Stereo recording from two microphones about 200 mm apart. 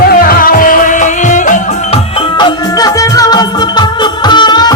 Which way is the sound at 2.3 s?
20° left (ahead or behind).